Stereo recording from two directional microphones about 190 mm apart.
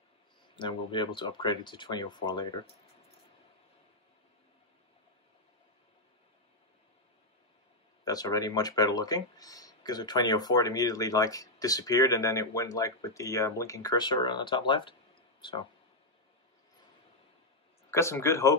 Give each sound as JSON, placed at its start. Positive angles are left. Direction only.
{"t": 0.6, "sound": "speech", "side_deg": 25}
{"t": 8.0, "sound": "speech", "side_deg": 20}
{"t": 17.9, "sound": "speech", "side_deg": 15}